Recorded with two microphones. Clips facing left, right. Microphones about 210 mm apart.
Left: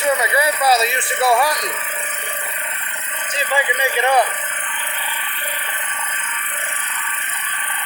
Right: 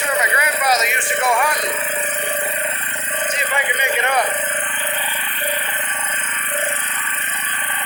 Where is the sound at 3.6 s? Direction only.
30° left (ahead or behind).